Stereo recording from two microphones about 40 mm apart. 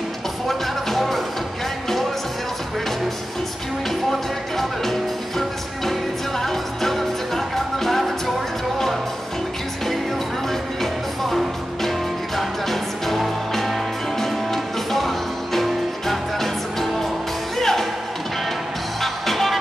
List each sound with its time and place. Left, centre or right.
0.5 s music: centre
4.1 s music: centre
10.5 s music: centre
18.9 s music: centre